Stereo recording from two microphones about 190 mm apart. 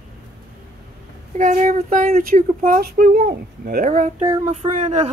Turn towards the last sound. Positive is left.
turn(degrees=-35)  # may be behind; listen again after turning